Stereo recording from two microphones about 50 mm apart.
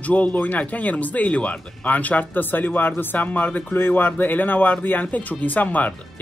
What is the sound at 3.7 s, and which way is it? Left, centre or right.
Speech, left.